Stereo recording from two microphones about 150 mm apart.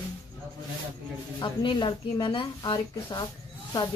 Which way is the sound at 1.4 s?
35° left (ahead or behind).